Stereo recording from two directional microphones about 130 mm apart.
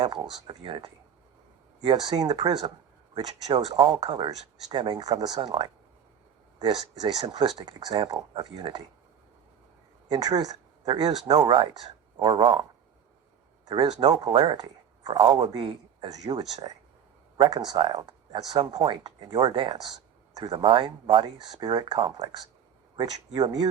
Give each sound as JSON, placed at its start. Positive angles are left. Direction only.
{"t": 0.0, "sound": "speech", "side_deg": -35}
{"t": 6.6, "sound": "speech", "side_deg": -30}
{"t": 10.1, "sound": "speech", "side_deg": -30}
{"t": 13.7, "sound": "speech", "side_deg": -30}
{"t": 18.8, "sound": "speech", "side_deg": -50}
{"t": 19.2, "sound": "speech", "side_deg": -35}